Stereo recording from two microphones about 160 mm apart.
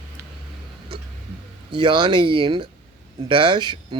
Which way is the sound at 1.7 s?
30° right (ahead or behind).